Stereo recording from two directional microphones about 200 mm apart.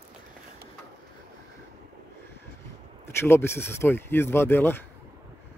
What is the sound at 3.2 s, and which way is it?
Speech, 10° left (ahead or behind).